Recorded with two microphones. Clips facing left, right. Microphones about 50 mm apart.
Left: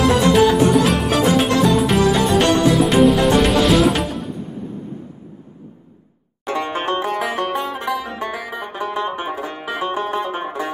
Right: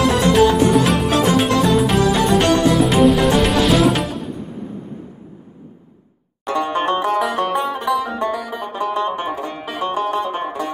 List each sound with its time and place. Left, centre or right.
0.0 s music: centre
7.0 s banjo: centre
7.5 s music: centre
8.2 s music: centre
8.6 s banjo: centre